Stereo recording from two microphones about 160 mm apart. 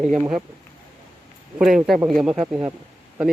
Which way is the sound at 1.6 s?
Centre (ahead or behind).